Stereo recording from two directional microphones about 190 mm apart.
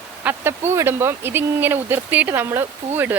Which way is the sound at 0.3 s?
10° right (ahead or behind).